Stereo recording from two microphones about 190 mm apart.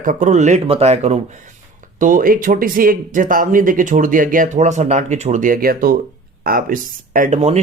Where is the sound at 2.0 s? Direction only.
45° right (ahead or behind).